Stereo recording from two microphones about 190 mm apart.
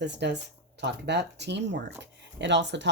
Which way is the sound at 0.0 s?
65° right (ahead or behind).